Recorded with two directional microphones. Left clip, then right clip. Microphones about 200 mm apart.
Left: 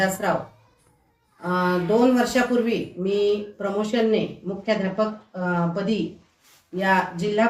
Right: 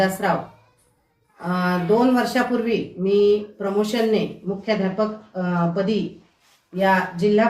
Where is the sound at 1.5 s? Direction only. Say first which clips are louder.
Right 1 dB; 10° left (ahead or behind).